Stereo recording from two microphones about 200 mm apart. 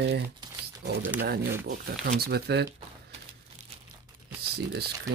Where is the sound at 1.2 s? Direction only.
50° right (ahead or behind).